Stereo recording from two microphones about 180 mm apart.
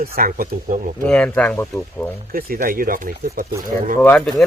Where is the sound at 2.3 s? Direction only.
55° right (ahead or behind).